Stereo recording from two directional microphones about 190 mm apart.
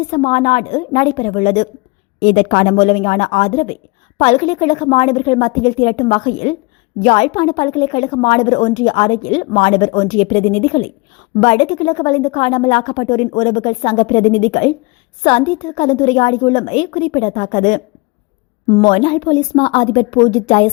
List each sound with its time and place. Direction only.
0.1 s a woman's voice: 30° left (ahead or behind)